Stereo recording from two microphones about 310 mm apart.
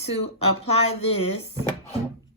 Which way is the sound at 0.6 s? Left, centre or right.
Centre.